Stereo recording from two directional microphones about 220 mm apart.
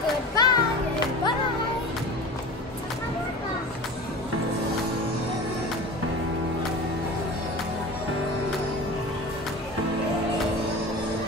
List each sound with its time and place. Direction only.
0.4 s music: 20° left (ahead or behind)